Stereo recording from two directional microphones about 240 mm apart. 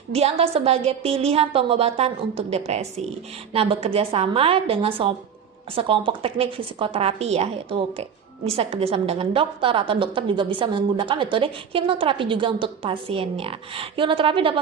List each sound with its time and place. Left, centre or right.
0.1 s a woman's voice: right